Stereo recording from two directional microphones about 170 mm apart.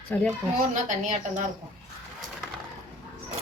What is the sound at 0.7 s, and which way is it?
Speech, 45° right (ahead or behind).